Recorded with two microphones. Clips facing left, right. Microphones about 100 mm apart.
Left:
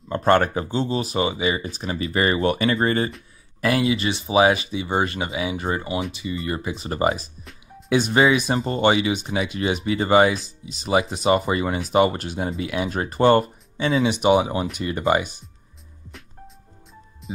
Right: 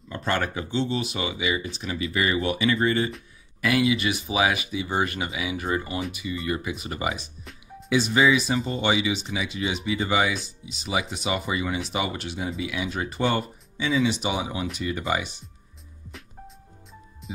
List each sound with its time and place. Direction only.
0.1 s speech: 45° left (ahead or behind)
7.9 s speech: 55° left (ahead or behind)
16.1 s music: centre (ahead or behind)